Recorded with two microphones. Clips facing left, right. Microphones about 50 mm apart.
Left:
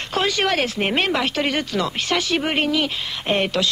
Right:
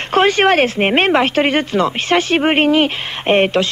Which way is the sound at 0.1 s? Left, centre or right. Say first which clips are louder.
Right 9 dB; right.